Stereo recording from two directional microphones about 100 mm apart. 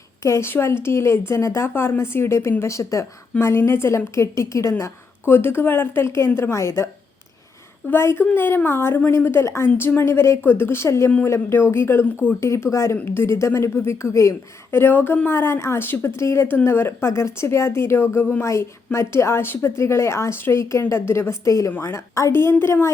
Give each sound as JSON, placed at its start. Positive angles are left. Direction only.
{"t": 0.2, "sound": "a woman's voice", "side_deg": 30}
{"t": 7.9, "sound": "a woman's voice", "side_deg": 25}